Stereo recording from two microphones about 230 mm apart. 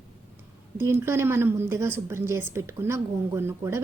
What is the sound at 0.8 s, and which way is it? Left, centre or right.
A woman's voice, centre.